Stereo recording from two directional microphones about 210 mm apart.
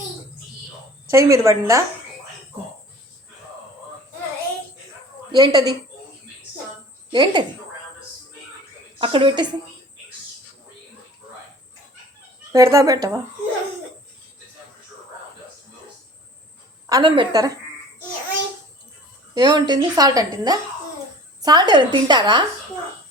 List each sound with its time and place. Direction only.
1.1 s speech: 15° right (ahead or behind)
5.3 s a woman's voice: 20° right (ahead or behind)
7.1 s a woman's voice: 20° right (ahead or behind)
9.0 s a woman's voice: 25° right (ahead or behind)
12.5 s speech: 15° right (ahead or behind)
16.9 s speech: 20° right (ahead or behind)
19.3 s a woman's voice: 20° right (ahead or behind)